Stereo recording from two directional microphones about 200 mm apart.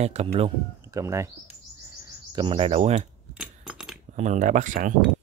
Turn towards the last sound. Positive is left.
turn(degrees=-40)  # may be behind; listen again after turning